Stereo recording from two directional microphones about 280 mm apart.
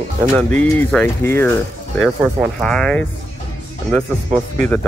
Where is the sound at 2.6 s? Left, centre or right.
Centre.